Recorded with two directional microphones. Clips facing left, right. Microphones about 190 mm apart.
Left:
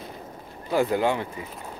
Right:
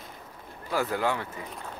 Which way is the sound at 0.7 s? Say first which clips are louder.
Left 5 dB; 20° left (ahead or behind).